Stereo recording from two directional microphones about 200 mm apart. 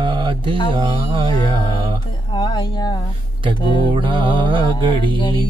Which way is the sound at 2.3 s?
25° left (ahead or behind).